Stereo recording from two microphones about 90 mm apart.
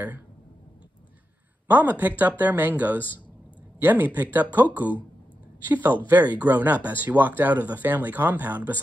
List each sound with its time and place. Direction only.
1.7 s speech: 20° right (ahead or behind)